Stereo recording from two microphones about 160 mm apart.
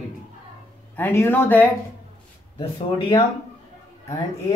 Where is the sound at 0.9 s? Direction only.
15° left (ahead or behind).